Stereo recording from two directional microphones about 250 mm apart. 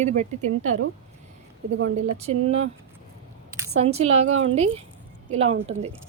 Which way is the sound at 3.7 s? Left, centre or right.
Right.